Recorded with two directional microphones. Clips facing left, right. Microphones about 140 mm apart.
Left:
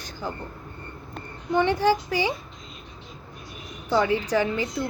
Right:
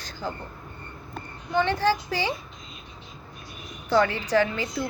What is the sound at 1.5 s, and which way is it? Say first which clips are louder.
Speech: left 2 dB; 15° left (ahead or behind).